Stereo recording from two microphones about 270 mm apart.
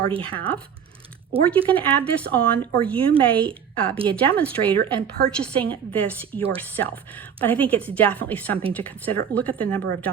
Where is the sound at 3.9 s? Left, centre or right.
Centre.